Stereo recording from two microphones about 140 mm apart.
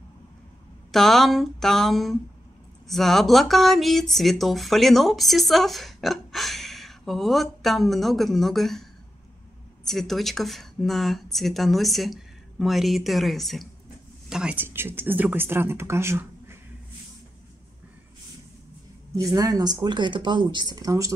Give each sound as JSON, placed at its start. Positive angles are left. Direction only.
{"t": 0.9, "sound": "speech", "side_deg": 0}
{"t": 9.8, "sound": "speech", "side_deg": 0}
{"t": 14.3, "sound": "speech", "side_deg": -10}
{"t": 19.3, "sound": "speech", "side_deg": -25}